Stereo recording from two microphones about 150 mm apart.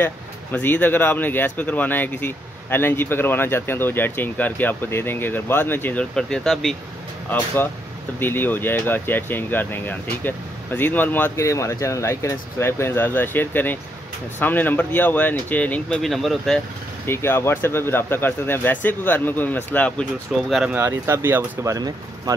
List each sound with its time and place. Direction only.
0.0 s speech: 15° left (ahead or behind)
7.2 s speech: 15° left (ahead or behind)
17.0 s speech: 15° left (ahead or behind); by 20.7 s centre (ahead or behind)
20.7 s speech: 15° right (ahead or behind)